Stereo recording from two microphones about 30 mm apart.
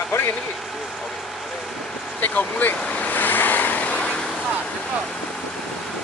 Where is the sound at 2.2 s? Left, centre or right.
Left.